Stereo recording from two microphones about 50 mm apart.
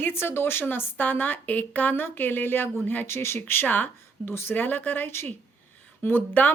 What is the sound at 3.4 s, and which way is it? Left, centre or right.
Speech, left.